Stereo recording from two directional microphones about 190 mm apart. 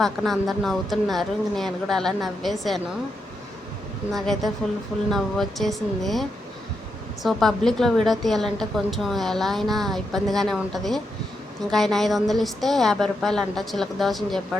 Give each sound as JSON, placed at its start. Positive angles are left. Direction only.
{"t": 0.0, "sound": "a woman's voice", "side_deg": 0}
{"t": 4.1, "sound": "a woman's voice", "side_deg": 0}